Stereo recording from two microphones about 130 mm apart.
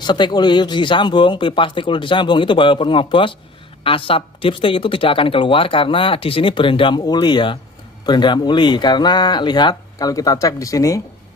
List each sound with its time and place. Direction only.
0.0 s speech: 35° left (ahead or behind)